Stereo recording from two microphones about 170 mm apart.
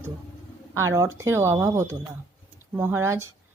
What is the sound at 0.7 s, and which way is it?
Speech, 15° right (ahead or behind).